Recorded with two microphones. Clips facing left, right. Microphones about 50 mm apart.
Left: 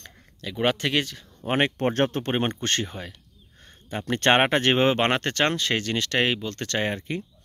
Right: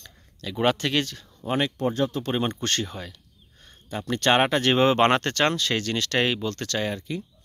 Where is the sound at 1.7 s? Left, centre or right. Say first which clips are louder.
Left 2 dB; left.